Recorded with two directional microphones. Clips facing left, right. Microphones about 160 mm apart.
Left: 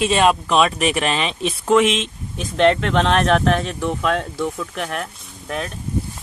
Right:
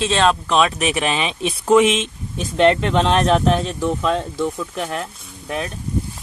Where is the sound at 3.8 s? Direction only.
20° right (ahead or behind).